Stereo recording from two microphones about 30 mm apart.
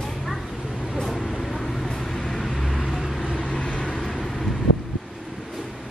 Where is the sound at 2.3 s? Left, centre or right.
Centre.